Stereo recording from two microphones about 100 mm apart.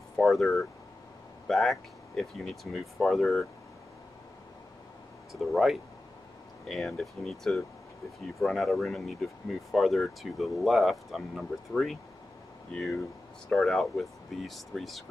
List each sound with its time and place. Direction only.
0.1 s speech: centre (ahead or behind)
5.3 s speech: centre (ahead or behind)
13.5 s speech: 5° left (ahead or behind)